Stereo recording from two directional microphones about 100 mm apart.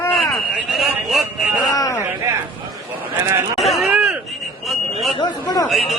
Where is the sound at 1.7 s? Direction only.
35° left (ahead or behind).